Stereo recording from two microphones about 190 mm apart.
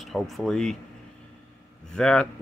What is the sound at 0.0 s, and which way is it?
Speech, centre (ahead or behind).